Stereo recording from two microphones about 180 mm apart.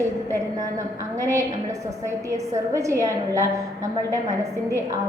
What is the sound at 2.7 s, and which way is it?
Speech, 15° right (ahead or behind).